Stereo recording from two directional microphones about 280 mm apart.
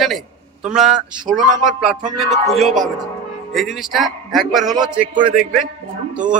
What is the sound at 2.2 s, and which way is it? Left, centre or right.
Speech, right.